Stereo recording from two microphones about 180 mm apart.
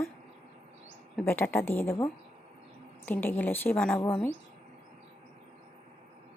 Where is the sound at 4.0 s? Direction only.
25° left (ahead or behind).